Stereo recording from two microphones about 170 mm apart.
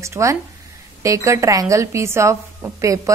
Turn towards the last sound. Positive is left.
turn(degrees=-20)  # may be behind; listen again after turning